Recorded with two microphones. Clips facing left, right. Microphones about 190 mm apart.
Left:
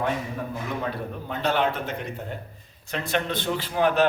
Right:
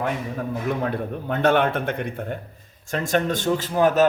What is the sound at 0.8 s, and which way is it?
Speech, 55° right (ahead or behind).